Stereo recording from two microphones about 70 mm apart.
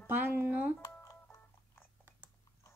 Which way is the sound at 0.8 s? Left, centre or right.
Left.